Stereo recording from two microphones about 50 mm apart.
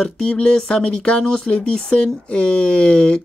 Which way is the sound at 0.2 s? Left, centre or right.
Left.